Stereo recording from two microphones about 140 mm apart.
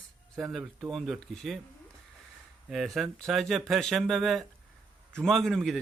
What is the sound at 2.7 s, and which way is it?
Speech, centre (ahead or behind).